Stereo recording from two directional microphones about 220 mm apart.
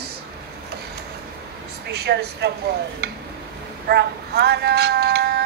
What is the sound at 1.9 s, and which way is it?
Speech, 50° right (ahead or behind).